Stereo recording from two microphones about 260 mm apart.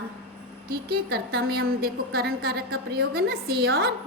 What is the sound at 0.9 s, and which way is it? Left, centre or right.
A woman's voice, right.